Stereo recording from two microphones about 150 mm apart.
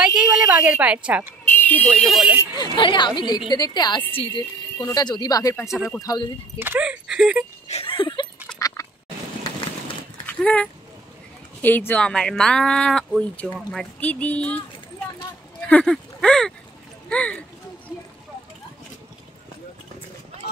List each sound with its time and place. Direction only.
0.0 s a woman's voice: 10° right (ahead or behind)
1.4 s speech: 10° left (ahead or behind)
2.5 s a woman's voice: 30° left (ahead or behind)
6.6 s speech: 10° right (ahead or behind)
7.6 s speech: 40° left (ahead or behind)
8.5 s duck: 25° left (ahead or behind)
10.2 s speech: 10° left (ahead or behind)
15.6 s speech: 5° left (ahead or behind)
17.1 s a sound: 10° left (ahead or behind)